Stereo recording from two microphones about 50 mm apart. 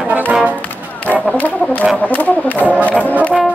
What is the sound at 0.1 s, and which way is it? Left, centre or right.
Music, right.